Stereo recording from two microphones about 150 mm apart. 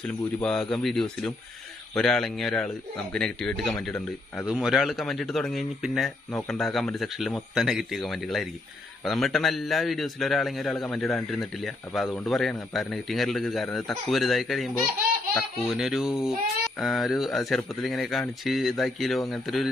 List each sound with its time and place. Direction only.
0.4 s a man's voice: 5° left (ahead or behind)